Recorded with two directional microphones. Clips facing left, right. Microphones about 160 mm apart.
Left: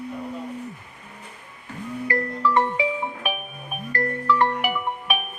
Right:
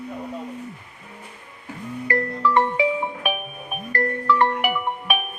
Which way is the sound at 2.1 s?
60° right (ahead or behind).